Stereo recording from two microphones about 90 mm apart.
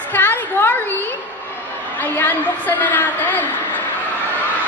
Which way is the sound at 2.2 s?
20° left (ahead or behind).